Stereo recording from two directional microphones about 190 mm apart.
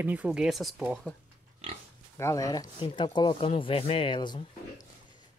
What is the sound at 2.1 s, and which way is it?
Speech, 15° left (ahead or behind).